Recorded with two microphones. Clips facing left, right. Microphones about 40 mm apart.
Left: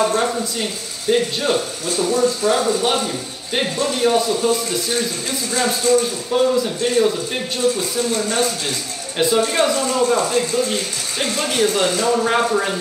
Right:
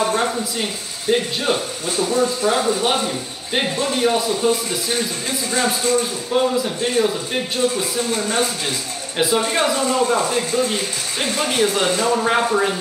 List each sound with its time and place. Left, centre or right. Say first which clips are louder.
0.0 s speech: left 1 dB; centre